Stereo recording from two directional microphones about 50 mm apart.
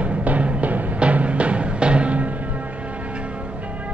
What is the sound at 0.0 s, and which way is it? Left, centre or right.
Music, right.